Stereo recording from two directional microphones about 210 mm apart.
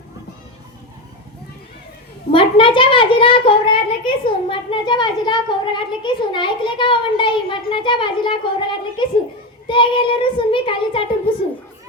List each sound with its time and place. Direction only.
2.3 s a child's voice: 25° left (ahead or behind)